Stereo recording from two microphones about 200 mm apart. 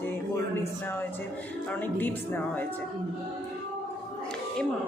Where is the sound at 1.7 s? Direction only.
10° left (ahead or behind).